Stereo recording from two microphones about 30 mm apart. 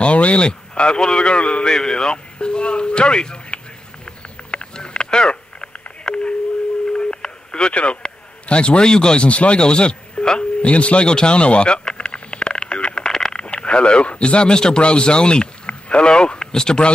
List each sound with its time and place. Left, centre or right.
0.0 s a man's voice: left
1.6 s speech: left
4.7 s a sound: left
6.0 s busy signal: left
6.9 s telephone: left
7.7 s a man's voice: left
9.3 s speech: left
9.6 s speech: left
10.6 s speech: left
11.1 s radio: left
13.5 s speech: left
14.5 s a man's voice: left